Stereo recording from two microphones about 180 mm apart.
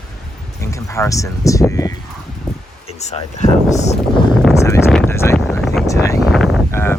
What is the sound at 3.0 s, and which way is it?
Speech, 40° left (ahead or behind).